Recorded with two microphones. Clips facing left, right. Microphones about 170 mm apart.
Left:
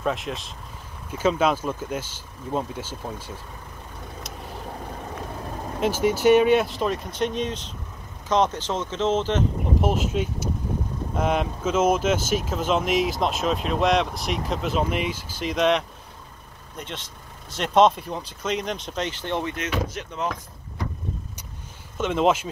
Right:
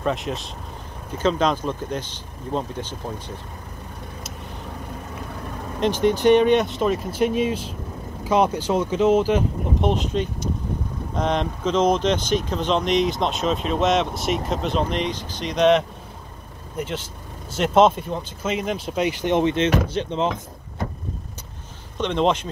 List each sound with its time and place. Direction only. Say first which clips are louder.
0.0 s speech: right 2 dB; centre (ahead or behind)
5.8 s speech: right 3 dB; 5° left (ahead or behind); by 9.4 s 10° right (ahead or behind)
9.8 s speech: right 2 dB; 5° left (ahead or behind); by 20.3 s 25° right (ahead or behind)
21.9 s speech: even; 5° left (ahead or behind)